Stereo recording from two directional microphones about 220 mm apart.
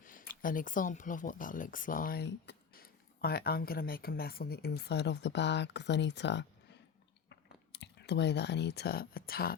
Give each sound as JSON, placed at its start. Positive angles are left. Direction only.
{"t": 0.0, "sound": "speech", "side_deg": 40}